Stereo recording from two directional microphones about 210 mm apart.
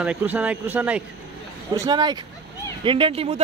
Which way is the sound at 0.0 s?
5° right (ahead or behind).